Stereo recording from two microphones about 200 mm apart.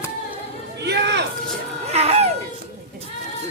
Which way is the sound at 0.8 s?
55° right (ahead or behind).